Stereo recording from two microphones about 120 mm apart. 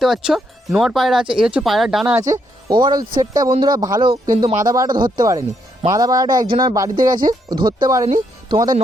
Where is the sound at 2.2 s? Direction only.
30° right (ahead or behind).